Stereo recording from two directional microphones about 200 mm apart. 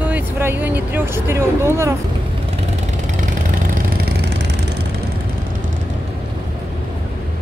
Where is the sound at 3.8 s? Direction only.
55° right (ahead or behind).